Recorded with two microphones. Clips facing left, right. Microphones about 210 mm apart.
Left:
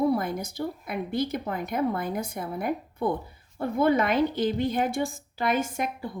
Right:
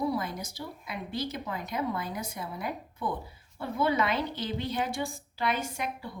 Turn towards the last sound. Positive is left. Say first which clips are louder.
# left 6 dB
turn(degrees=50)  # may be behind; listen again after turning